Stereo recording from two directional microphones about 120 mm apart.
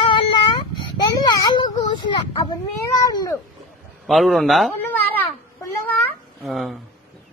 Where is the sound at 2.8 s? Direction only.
30° left (ahead or behind).